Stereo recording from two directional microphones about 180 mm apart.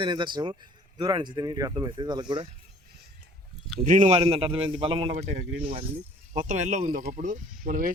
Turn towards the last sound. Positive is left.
turn(degrees=-50)  # may be behind; listen again after turning